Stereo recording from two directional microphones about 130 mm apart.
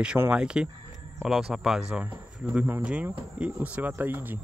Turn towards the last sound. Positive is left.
turn(degrees=-15)  # may be behind; listen again after turning